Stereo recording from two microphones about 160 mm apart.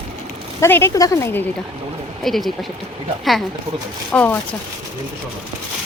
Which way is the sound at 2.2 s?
Centre (ahead or behind).